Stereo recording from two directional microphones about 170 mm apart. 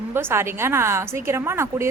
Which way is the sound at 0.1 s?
15° right (ahead or behind).